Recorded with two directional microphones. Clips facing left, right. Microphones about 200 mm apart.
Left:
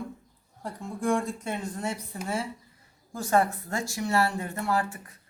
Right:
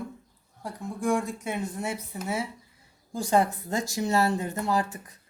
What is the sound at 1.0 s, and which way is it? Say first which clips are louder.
Speech: even; centre (ahead or behind).